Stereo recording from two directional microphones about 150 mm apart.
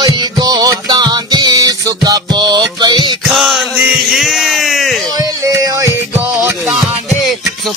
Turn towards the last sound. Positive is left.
turn(degrees=0)  # may be behind; listen again after turning